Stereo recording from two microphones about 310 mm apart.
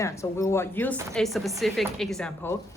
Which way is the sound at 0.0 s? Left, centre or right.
Centre.